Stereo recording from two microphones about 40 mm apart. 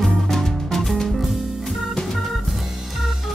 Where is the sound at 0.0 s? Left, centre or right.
Centre.